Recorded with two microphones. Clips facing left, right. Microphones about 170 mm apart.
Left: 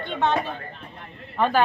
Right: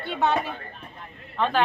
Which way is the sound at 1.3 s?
5° left (ahead or behind).